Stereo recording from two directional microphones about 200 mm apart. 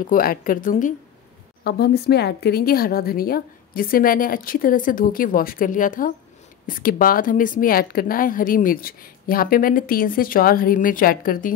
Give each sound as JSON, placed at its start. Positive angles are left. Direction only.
{"t": 0.0, "sound": "a woman's voice", "side_deg": 45}
{"t": 1.6, "sound": "a woman's voice", "side_deg": 55}